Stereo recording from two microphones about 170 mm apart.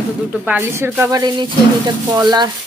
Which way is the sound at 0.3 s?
10° right (ahead or behind).